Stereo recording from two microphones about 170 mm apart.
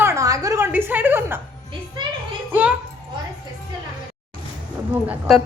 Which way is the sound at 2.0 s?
25° right (ahead or behind).